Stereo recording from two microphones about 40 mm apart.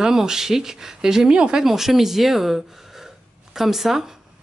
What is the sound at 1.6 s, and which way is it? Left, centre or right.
Speech, centre.